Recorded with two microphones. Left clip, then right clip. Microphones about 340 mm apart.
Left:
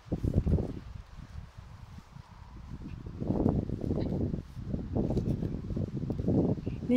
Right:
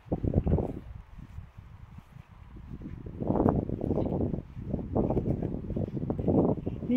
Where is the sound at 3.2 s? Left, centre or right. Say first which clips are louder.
Right 4 dB; right.